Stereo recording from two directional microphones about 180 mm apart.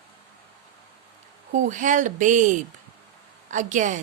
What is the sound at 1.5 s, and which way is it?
Speech, 45° right (ahead or behind).